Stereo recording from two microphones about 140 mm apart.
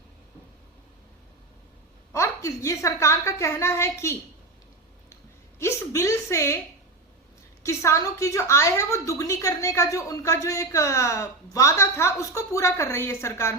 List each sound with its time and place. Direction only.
2.1 s speech: 20° left (ahead or behind)
5.5 s a woman's voice: 20° left (ahead or behind)
7.6 s speech: 20° left (ahead or behind)